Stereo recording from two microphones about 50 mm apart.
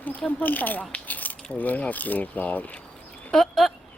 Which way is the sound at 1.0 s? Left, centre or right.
Left.